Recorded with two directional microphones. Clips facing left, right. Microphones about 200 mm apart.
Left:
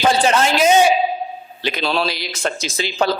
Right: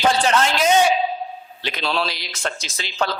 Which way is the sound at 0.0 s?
10° left (ahead or behind).